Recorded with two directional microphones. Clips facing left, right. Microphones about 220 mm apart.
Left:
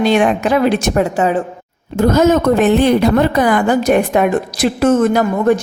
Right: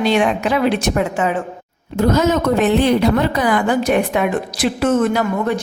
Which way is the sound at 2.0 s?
50° left (ahead or behind).